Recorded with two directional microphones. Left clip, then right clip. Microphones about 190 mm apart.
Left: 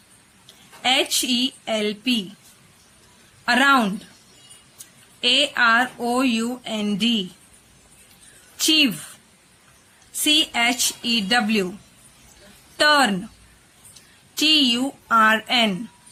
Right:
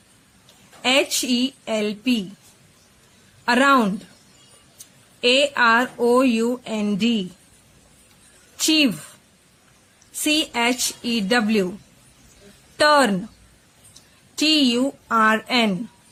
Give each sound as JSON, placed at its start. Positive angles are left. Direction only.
{"t": 0.8, "sound": "speech", "side_deg": -35}
{"t": 3.4, "sound": "speech", "side_deg": -35}
{"t": 5.2, "sound": "speech", "side_deg": -35}
{"t": 8.5, "sound": "a woman's voice", "side_deg": -35}
{"t": 10.2, "sound": "speech", "side_deg": -35}
{"t": 12.7, "sound": "a woman's voice", "side_deg": -30}
{"t": 14.3, "sound": "speech", "side_deg": -35}